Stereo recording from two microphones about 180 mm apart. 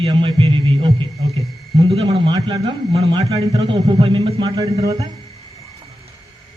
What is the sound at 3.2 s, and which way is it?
A man's voice, 35° right (ahead or behind).